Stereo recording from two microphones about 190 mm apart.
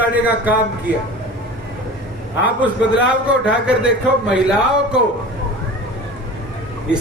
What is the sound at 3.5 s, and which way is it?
Speech, 5° right (ahead or behind).